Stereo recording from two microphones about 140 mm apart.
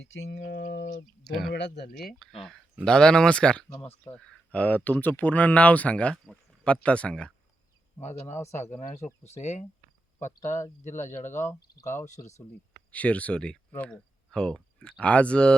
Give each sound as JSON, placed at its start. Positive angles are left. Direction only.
{"t": 1.2, "sound": "speech", "side_deg": 0}
{"t": 8.2, "sound": "speech", "side_deg": 20}
{"t": 9.2, "sound": "speech", "side_deg": 50}
{"t": 11.4, "sound": "speech", "side_deg": 25}
{"t": 12.9, "sound": "speech", "side_deg": 10}